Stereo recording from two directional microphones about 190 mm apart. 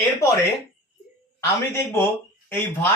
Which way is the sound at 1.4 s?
15° left (ahead or behind).